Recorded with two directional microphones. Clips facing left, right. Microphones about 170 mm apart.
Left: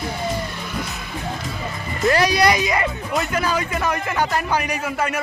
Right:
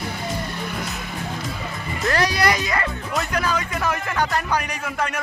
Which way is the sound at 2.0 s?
15° left (ahead or behind).